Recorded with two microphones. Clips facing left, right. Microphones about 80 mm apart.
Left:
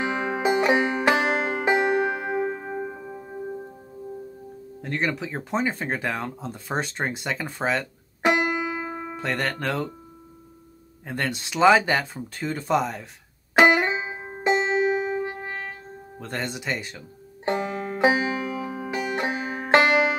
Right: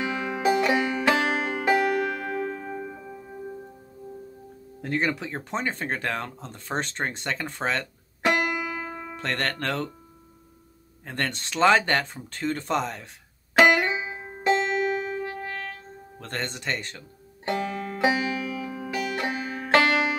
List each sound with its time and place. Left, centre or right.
0.0 s music: left
4.8 s speech: centre
9.2 s speech: centre
11.1 s speech: centre
13.6 s music: centre
16.2 s speech: centre
17.5 s banjo: centre